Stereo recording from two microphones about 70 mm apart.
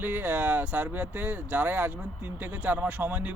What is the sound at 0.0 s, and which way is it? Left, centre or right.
Speech, right.